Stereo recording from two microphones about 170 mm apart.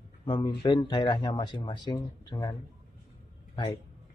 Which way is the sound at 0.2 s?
25° left (ahead or behind).